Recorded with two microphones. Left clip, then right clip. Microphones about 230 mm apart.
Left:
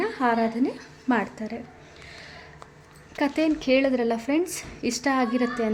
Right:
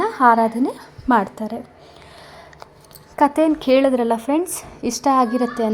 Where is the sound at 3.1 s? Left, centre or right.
Centre.